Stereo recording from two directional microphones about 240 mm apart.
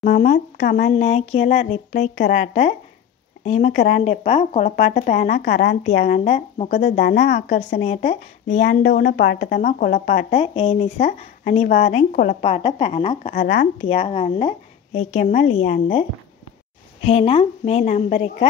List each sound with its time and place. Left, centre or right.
0.2 s speech: left
3.7 s speech: left
4.0 s speech: left
5.9 s speech: left
12.4 s speech: left
13.3 s speech: left